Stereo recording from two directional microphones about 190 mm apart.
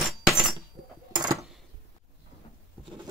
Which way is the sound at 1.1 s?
20° right (ahead or behind).